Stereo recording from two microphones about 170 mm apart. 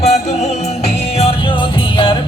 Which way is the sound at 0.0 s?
40° left (ahead or behind).